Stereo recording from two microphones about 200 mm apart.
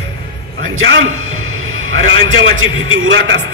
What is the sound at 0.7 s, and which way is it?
A man's voice, 75° right (ahead or behind).